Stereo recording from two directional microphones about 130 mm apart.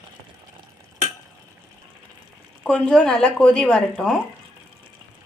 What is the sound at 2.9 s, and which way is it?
Speech, 5° left (ahead or behind).